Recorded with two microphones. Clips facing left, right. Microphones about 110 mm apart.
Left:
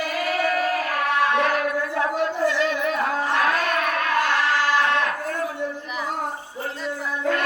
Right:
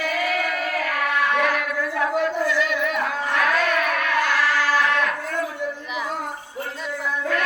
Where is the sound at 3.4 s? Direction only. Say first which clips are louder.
Right 1 dB; 35° left (ahead or behind).